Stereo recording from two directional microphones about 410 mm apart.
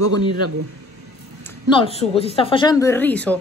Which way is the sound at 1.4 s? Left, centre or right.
Centre.